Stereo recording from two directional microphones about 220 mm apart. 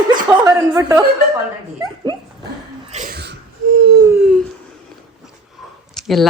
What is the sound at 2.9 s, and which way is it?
Sneeze, 40° right (ahead or behind).